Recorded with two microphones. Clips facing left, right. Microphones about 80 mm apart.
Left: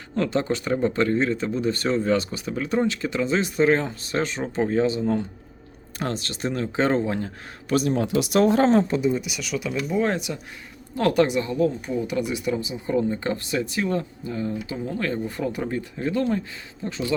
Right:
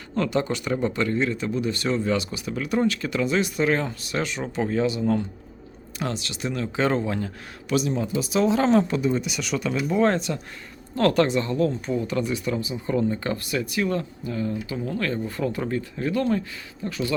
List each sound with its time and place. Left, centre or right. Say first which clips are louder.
0.2 s speech: left 1 dB; left
6.0 s speech: left 1 dB; left
7.7 s speech: left 2 dB; left
8.0 s speech: left 3 dB; left
8.6 s speech: left 1 dB; left
9.0 s speech: left 1 dB; centre
9.2 s speech: right 2 dB; centre; by 17.2 s left